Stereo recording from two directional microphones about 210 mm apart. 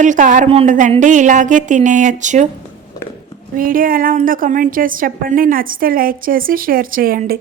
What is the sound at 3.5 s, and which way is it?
A woman's voice, 40° right (ahead or behind).